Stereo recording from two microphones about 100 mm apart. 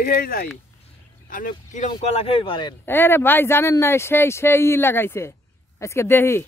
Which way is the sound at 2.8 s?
20° left (ahead or behind).